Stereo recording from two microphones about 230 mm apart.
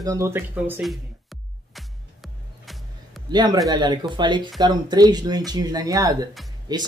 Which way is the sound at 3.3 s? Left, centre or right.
Centre.